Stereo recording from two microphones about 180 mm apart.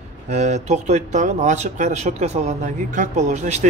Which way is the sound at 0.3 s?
40° right (ahead or behind).